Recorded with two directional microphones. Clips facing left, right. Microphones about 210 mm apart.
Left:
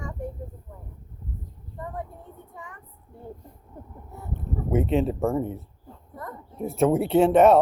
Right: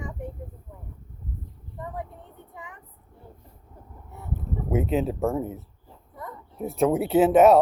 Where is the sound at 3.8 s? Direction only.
55° left (ahead or behind).